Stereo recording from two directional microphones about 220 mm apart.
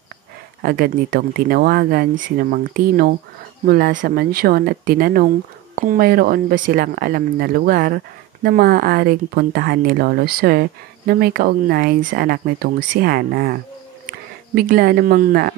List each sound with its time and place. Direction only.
0.6 s speech: 45° right (ahead or behind)